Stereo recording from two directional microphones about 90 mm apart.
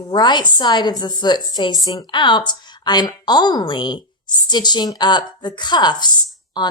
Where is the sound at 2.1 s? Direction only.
60° left (ahead or behind).